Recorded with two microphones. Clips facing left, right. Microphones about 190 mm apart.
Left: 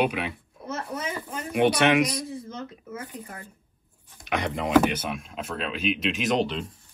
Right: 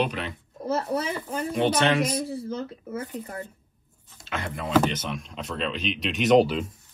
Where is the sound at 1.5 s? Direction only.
10° left (ahead or behind).